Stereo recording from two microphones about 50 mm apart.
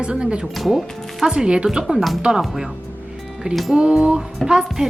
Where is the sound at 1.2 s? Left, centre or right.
Centre.